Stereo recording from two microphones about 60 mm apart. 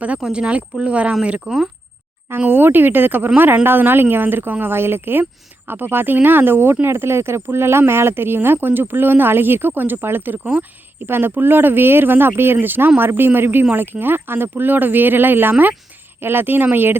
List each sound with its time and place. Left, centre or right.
0.2 s speech: centre
1.5 s speech: centre
2.5 s speech: right